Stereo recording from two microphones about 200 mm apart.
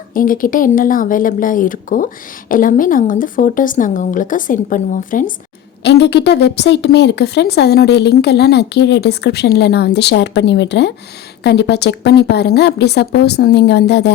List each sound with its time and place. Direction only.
0.1 s speech: 45° left (ahead or behind)
5.8 s a woman's voice: 60° left (ahead or behind)